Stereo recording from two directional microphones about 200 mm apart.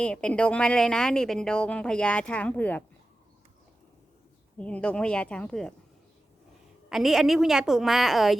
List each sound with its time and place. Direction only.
0.0 s speech: 5° left (ahead or behind)
4.5 s speech: 5° left (ahead or behind)
6.9 s speech: centre (ahead or behind)